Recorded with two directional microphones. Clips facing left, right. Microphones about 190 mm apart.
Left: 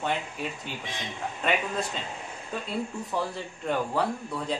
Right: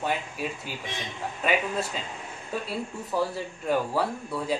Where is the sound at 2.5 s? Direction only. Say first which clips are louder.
Even; 5° right (ahead or behind).